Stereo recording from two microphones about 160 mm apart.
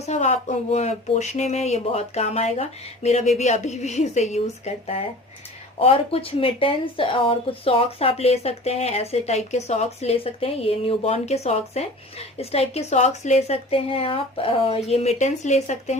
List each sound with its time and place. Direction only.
0.0 s speech: 45° left (ahead or behind)